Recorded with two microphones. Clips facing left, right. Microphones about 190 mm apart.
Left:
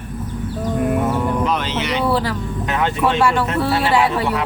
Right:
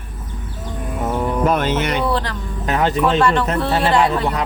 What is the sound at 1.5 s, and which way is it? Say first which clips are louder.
Speech: right 3 dB; 50° right (ahead or behind).